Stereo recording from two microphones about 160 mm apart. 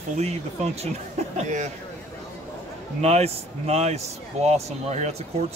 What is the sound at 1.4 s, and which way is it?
Speech, 50° right (ahead or behind).